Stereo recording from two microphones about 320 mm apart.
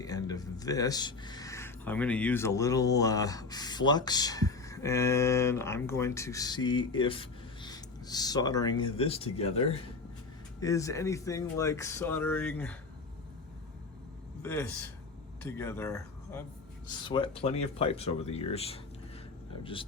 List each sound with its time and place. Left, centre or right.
0.0 s speech: centre
14.4 s speech: centre